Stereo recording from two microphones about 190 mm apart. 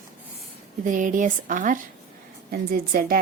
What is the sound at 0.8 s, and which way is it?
Speech, 45° right (ahead or behind).